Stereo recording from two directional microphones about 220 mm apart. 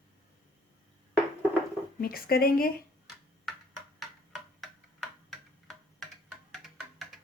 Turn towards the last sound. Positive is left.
turn(degrees=0)  # may be behind; listen again after turning